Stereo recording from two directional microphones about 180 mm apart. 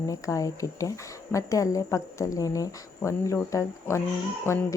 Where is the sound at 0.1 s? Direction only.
20° left (ahead or behind).